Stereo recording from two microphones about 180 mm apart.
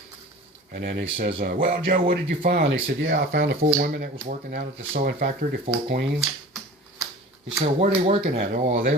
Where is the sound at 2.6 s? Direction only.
90° right.